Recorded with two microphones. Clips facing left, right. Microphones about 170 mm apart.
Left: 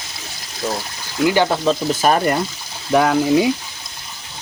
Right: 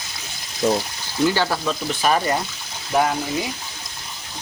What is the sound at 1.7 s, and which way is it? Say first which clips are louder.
Speech: left 5 dB; 40° left (ahead or behind).